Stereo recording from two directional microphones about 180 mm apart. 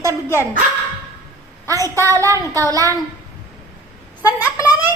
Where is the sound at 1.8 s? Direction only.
15° left (ahead or behind).